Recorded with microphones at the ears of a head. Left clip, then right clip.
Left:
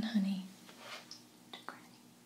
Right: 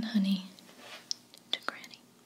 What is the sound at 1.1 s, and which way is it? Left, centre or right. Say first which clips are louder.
Whispering: right 15 dB; right.